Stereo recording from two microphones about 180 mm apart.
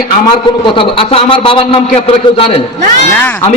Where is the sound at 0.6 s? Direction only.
30° left (ahead or behind).